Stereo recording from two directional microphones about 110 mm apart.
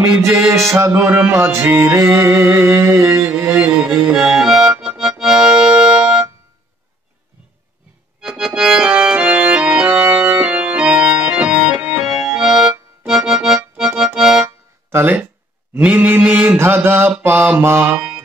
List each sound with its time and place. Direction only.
0.0 s music: 30° right (ahead or behind)
3.3 s accordion: 15° right (ahead or behind)
8.2 s music: 5° right (ahead or behind)
14.9 s speech: 20° right (ahead or behind)
15.7 s mantra: 15° right (ahead or behind)
17.9 s music: 5° right (ahead or behind)